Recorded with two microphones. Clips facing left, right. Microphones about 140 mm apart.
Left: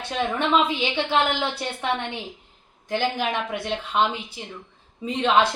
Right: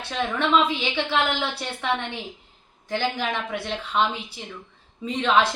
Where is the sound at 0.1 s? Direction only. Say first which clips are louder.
Even; 15° left (ahead or behind).